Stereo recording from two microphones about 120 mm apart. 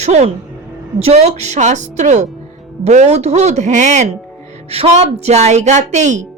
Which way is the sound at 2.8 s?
65° right (ahead or behind).